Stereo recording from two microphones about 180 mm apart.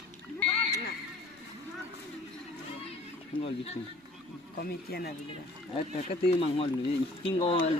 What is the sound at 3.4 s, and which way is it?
Speech, 35° left (ahead or behind).